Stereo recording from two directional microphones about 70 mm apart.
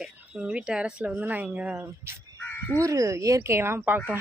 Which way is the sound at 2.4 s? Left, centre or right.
Left.